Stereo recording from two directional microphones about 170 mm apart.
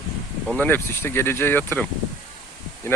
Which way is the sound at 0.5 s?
10° left (ahead or behind).